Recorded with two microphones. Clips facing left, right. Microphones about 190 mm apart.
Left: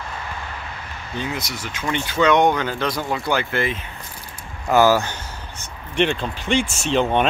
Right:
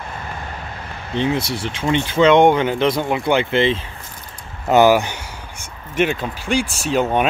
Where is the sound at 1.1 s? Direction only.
25° right (ahead or behind).